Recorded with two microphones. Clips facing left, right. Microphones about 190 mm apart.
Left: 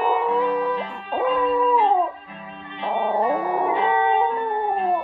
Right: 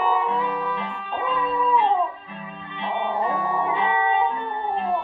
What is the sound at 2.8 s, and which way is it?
Music, 45° left (ahead or behind).